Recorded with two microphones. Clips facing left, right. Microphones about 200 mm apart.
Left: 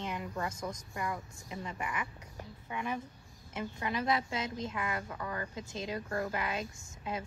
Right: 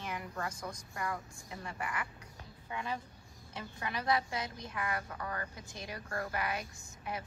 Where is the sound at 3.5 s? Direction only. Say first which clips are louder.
Left 5 dB; 20° left (ahead or behind).